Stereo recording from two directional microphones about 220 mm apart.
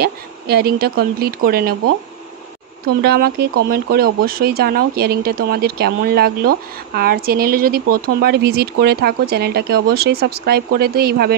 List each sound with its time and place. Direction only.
0.0 s speech: 45° right (ahead or behind)
3.0 s speech: 45° right (ahead or behind)